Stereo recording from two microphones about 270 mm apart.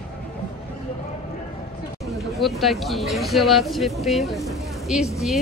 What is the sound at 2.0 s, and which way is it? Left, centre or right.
Speech, centre.